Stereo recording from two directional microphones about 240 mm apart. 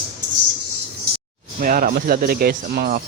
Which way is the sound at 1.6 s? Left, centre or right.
Right.